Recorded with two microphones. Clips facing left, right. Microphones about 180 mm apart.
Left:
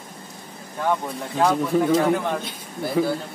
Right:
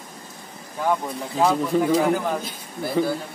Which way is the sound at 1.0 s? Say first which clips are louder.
Even; 5° right (ahead or behind).